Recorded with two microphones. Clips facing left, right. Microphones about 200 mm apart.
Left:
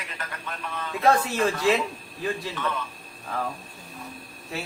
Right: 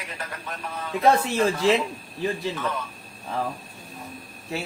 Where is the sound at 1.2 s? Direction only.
25° right (ahead or behind).